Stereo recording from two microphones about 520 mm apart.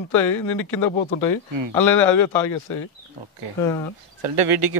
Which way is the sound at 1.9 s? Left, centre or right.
Left.